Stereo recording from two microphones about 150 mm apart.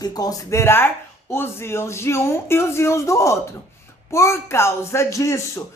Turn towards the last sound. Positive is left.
turn(degrees=20)  # may be behind; listen again after turning